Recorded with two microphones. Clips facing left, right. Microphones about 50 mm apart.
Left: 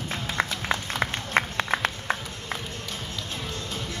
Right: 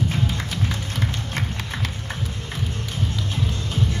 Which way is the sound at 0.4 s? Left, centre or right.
Left.